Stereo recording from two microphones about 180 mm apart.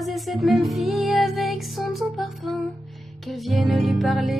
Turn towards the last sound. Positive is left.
turn(degrees=0)  # may be behind; listen again after turning